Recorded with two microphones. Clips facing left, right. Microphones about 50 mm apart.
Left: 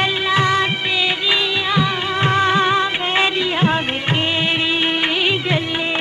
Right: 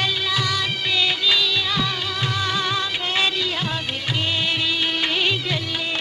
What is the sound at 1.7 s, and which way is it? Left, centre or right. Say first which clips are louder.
Music of bollywood: left 6 dB; left.